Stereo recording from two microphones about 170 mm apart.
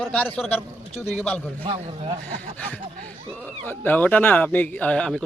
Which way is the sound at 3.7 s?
10° left (ahead or behind).